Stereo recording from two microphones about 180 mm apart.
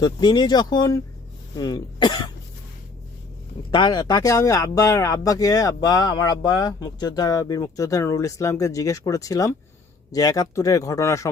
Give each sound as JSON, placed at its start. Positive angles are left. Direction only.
{"t": 0.0, "sound": "speech", "side_deg": 25}
{"t": 3.7, "sound": "speech", "side_deg": 25}